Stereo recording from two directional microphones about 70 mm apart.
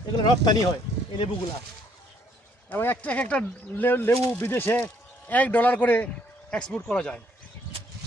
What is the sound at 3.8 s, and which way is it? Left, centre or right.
Speech, left.